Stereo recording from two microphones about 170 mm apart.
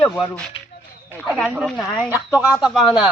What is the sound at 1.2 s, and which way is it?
Speech, 5° right (ahead or behind).